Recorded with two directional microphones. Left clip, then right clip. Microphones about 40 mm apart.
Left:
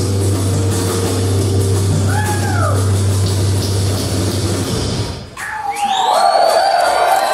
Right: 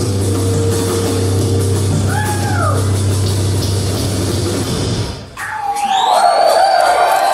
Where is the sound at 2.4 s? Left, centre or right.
Left.